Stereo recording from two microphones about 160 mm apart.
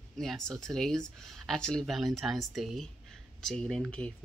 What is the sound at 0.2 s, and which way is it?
Speech, centre (ahead or behind).